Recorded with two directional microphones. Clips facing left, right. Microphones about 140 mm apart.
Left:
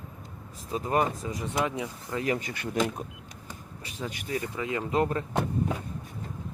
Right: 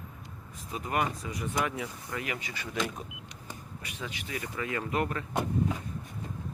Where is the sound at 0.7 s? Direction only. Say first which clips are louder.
Left 4 dB; 30° left (ahead or behind).